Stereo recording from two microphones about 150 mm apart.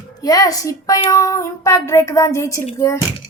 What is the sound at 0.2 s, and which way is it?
Speech, 25° left (ahead or behind).